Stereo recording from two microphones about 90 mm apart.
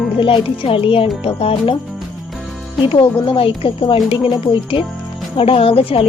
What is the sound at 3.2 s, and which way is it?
Speech, 80° left.